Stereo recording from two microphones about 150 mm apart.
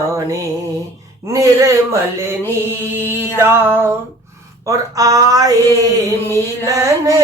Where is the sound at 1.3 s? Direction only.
20° right (ahead or behind).